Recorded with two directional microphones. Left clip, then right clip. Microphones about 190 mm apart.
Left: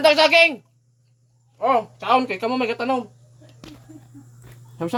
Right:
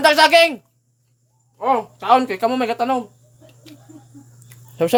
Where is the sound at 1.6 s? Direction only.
15° right (ahead or behind).